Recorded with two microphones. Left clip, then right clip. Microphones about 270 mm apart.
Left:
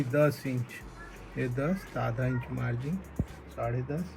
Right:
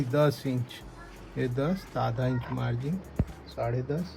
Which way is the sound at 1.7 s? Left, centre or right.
Centre.